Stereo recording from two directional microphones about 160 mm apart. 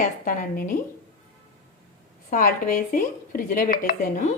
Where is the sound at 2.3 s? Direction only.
60° left (ahead or behind).